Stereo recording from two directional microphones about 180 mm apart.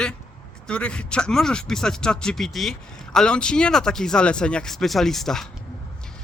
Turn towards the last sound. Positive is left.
turn(degrees=0)  # may be behind; listen again after turning